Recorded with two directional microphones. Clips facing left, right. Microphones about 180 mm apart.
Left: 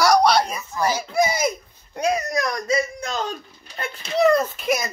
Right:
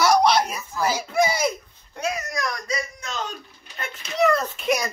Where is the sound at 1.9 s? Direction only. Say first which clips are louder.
Left 6 dB; 35° left (ahead or behind).